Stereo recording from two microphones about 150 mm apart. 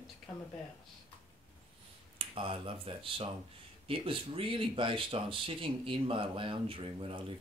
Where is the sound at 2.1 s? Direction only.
35° right (ahead or behind).